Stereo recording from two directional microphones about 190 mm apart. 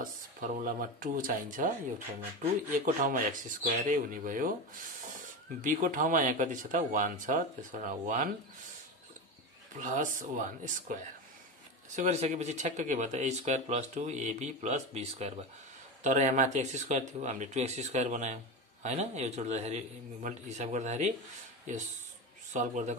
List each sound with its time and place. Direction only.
0.0 s speech: 45° right (ahead or behind)
2.8 s speech: 50° right (ahead or behind)
5.6 s speech: 45° right (ahead or behind)
9.8 s speech: 40° right (ahead or behind)